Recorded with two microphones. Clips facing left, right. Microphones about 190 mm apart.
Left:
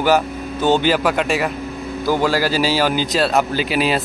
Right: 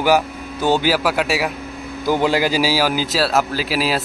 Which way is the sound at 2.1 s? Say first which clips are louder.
Right 1 dB; 20° right (ahead or behind).